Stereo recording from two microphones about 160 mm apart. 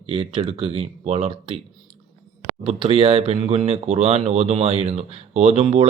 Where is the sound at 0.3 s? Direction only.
35° right (ahead or behind).